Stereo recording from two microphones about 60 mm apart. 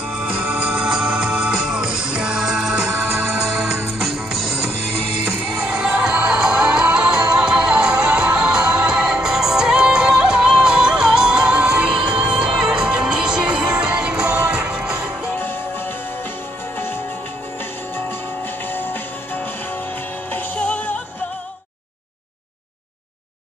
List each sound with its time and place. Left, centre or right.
0.1 s music: centre
18.7 s music: left
20.3 s music: left